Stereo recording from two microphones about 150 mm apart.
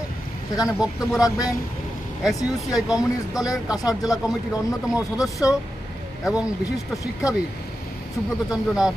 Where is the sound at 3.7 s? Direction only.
25° left (ahead or behind).